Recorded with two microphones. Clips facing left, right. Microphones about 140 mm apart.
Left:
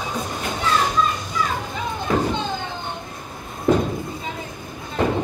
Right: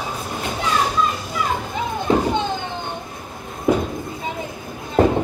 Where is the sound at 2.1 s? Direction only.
25° right (ahead or behind).